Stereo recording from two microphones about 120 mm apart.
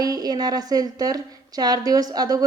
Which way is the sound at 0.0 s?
30° right (ahead or behind).